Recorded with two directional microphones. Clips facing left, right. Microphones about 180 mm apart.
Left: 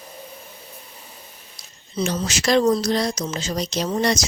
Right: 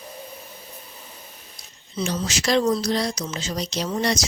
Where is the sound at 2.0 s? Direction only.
55° left (ahead or behind).